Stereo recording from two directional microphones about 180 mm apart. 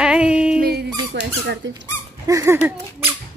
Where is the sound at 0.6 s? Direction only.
60° right (ahead or behind).